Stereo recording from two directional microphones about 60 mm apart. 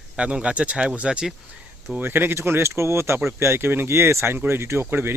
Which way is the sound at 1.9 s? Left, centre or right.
Right.